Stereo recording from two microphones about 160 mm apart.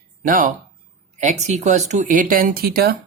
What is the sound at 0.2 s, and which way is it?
Speech, 55° right (ahead or behind).